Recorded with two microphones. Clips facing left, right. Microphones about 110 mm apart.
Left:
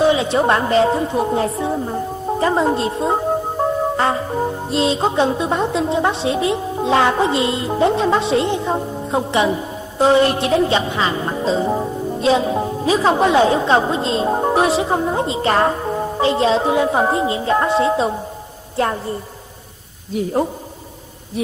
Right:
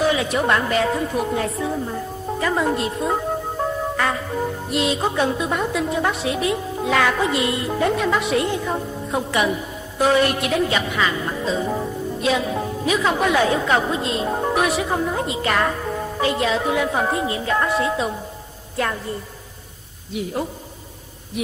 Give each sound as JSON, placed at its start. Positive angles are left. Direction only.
{"t": 0.0, "sound": "music", "side_deg": 25}
{"t": 20.2, "sound": "a man's voice", "side_deg": 40}